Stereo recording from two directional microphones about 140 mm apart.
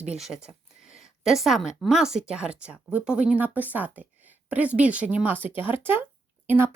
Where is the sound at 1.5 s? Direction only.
Centre (ahead or behind).